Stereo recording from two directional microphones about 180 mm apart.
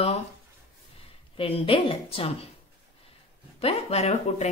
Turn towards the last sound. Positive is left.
turn(degrees=35)  # may be behind; listen again after turning